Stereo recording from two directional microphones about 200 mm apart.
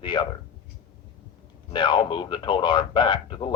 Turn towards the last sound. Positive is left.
turn(degrees=25)  # may be behind; listen again after turning